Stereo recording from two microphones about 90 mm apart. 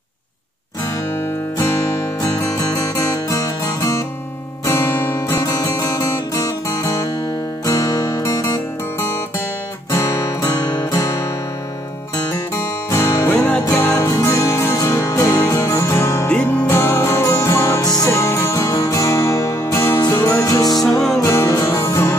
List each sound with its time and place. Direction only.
2.2 s music: 40° left (ahead or behind)
9.9 s music: 40° left (ahead or behind)
10.7 s music: 50° left (ahead or behind)
11.0 s music: 35° left (ahead or behind)
12.5 s music: 35° left (ahead or behind)
13.3 s music: 20° left (ahead or behind)
13.7 s music: 35° left (ahead or behind)
16.3 s music: 10° left (ahead or behind)
16.7 s music: 30° left (ahead or behind)
18.1 s music: 35° left (ahead or behind)
20.7 s music: 5° left (ahead or behind)
21.2 s music: 35° left (ahead or behind)